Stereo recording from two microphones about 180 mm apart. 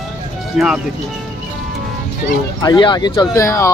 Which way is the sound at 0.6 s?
5° right (ahead or behind).